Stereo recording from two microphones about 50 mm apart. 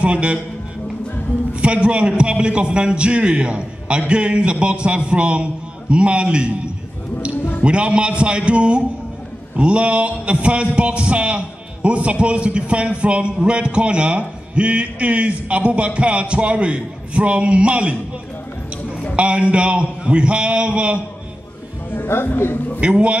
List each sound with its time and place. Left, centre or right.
0.0 s a man's voice: right
1.5 s a man's voice: right
19.1 s a man's voice: right
21.9 s a man's voice: left
22.8 s a man's voice: right